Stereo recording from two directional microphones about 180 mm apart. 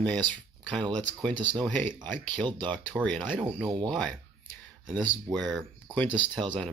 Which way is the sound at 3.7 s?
25° right (ahead or behind).